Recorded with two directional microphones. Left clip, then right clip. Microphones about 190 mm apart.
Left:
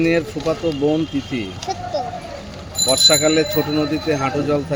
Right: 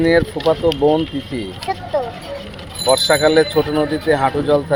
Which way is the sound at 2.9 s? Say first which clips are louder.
Right 1 dB; 20° left (ahead or behind).